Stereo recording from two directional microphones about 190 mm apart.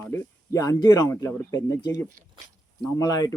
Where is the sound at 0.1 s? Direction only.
20° left (ahead or behind).